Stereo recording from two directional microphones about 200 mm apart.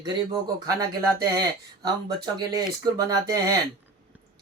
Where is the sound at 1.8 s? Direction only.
20° right (ahead or behind).